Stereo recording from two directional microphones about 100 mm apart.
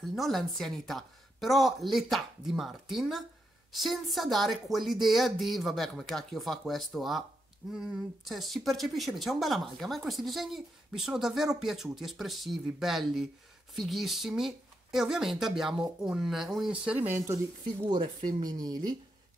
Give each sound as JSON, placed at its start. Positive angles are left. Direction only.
{"t": 0.1, "sound": "speech", "side_deg": 0}
{"t": 17.8, "sound": "speech", "side_deg": -50}